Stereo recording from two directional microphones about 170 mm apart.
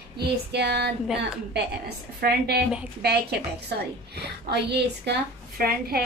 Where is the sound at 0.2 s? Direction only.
75° right (ahead or behind).